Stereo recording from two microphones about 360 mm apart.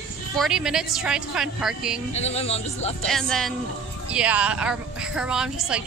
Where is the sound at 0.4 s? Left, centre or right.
Centre.